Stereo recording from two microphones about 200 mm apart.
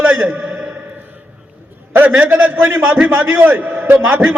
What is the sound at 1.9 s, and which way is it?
A man's voice, 10° right (ahead or behind).